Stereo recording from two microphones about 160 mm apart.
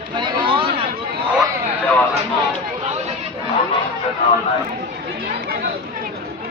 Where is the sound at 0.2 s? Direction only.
35° right (ahead or behind).